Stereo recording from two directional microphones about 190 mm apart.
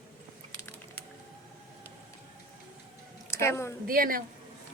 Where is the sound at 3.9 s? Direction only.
50° right (ahead or behind).